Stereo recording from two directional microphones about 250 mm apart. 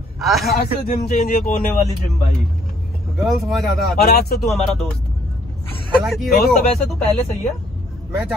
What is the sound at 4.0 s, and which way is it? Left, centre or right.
Speech, left.